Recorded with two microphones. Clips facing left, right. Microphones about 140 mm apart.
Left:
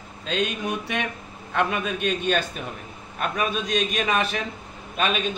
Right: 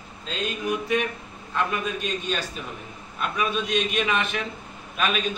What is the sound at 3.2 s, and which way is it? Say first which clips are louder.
A man's voice: left 1 dB; 45° left (ahead or behind).